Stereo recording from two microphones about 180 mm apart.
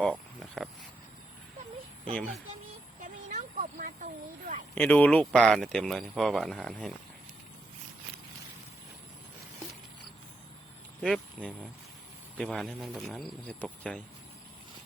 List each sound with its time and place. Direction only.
0.6 s speech: 5° left (ahead or behind)
3.0 s a sound: 45° right (ahead or behind)
4.7 s speech: 10° left (ahead or behind)
11.0 s speech: 5° left (ahead or behind)